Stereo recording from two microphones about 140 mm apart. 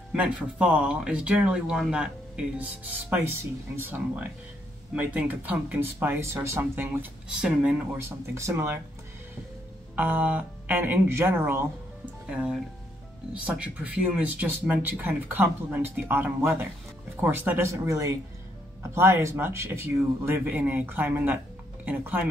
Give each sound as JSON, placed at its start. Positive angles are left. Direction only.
{"t": 0.1, "sound": "speech", "side_deg": -5}
{"t": 7.2, "sound": "speech", "side_deg": -5}
{"t": 8.0, "sound": "speech", "side_deg": -20}
{"t": 9.9, "sound": "speech", "side_deg": -15}
{"t": 13.3, "sound": "speech", "side_deg": -10}